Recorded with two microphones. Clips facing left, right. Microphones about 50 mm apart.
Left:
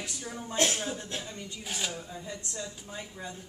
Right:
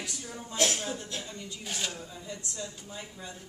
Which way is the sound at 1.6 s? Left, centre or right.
Centre.